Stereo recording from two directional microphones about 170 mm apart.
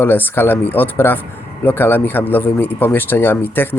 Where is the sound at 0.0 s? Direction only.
10° left (ahead or behind).